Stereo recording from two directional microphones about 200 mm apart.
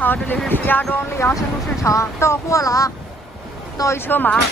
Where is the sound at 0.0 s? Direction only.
10° left (ahead or behind).